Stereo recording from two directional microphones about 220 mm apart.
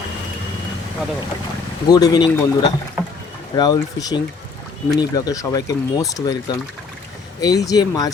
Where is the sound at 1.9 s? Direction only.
15° left (ahead or behind).